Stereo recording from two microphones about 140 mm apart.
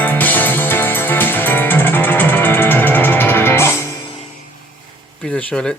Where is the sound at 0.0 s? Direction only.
10° left (ahead or behind).